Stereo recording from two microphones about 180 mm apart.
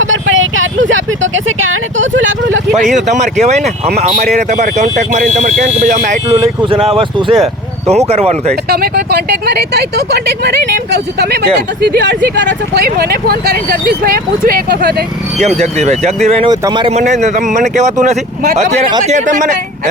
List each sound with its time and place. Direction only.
0.0 s speech: 90° right
2.8 s speech: 40° right (ahead or behind)
6.4 s speech: 25° right (ahead or behind)
8.7 s speech: 60° right (ahead or behind)
12.5 s speech: 65° right (ahead or behind)
15.4 s speech: 40° right (ahead or behind)
16.9 s speech: 40° right (ahead or behind)